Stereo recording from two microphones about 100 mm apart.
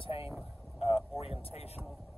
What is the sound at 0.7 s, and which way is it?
Speech, 75° left (ahead or behind).